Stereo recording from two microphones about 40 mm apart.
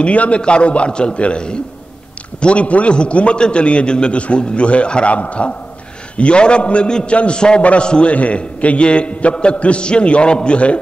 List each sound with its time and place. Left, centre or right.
0.0 s a man's voice: left